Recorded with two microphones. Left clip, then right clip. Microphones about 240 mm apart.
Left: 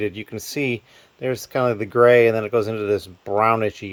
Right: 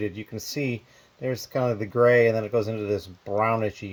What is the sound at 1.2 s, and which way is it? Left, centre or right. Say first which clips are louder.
Speech: left 5 dB; centre.